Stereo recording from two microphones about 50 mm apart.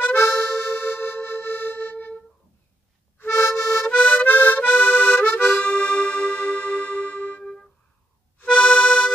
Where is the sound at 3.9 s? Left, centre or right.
Left.